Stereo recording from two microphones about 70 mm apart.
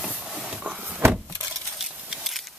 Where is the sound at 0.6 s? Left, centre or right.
Centre.